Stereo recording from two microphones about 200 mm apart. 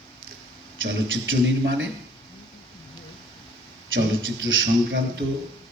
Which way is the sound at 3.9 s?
70° right (ahead or behind).